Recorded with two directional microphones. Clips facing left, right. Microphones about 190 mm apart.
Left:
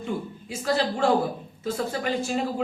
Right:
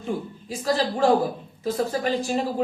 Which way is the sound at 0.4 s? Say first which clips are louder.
Right 1 dB; 35° right (ahead or behind).